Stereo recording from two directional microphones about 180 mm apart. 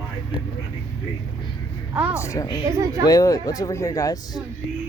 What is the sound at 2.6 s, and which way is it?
Speech, 20° right (ahead or behind).